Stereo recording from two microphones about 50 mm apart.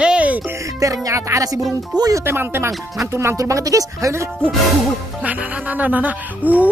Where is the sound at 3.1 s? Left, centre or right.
Right.